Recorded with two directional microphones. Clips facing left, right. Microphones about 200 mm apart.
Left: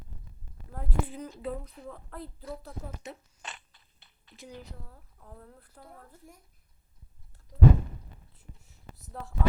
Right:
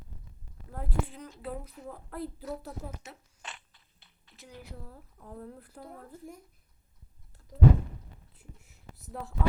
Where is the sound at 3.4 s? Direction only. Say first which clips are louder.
Left 1 dB; 40° left (ahead or behind).